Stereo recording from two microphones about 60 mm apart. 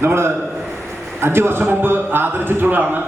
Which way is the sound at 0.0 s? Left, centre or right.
Right.